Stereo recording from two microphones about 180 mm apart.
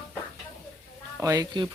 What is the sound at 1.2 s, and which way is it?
Speech, 20° right (ahead or behind).